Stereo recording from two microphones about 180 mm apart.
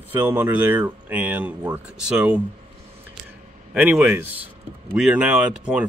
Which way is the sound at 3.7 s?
5° right (ahead or behind).